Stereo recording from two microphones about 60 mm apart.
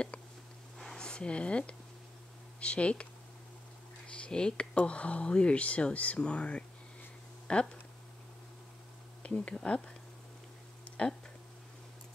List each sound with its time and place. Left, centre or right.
0.7 s a sound: centre
2.6 s speech: centre
4.1 s speech: centre
9.2 s speech: left
11.0 s speech: centre